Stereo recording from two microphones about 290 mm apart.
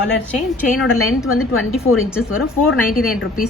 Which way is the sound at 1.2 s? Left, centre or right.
Left.